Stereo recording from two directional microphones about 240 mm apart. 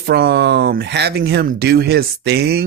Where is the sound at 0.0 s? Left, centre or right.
Right.